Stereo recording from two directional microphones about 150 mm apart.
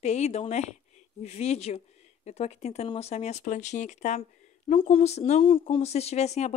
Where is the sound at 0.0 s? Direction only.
50° left (ahead or behind).